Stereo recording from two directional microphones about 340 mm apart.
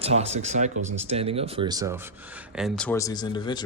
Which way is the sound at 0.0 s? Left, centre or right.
Centre.